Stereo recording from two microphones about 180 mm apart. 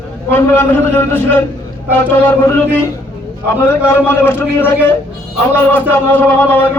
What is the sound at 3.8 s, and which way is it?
Speech, 15° left (ahead or behind).